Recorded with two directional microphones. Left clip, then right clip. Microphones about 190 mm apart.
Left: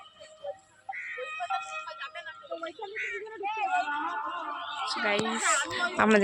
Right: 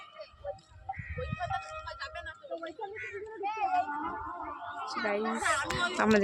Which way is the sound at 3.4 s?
50° left (ahead or behind).